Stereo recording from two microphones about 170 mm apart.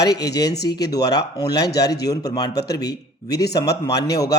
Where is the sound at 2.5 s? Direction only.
75° left (ahead or behind).